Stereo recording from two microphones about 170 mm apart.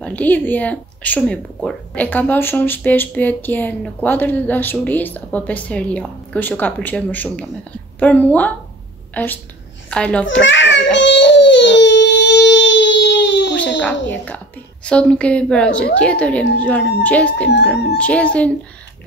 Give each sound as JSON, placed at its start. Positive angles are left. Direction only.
{"t": 0.0, "sound": "a woman's voice", "side_deg": 10}
{"t": 10.4, "sound": "baby cry", "side_deg": 90}
{"t": 13.7, "sound": "speech", "side_deg": 10}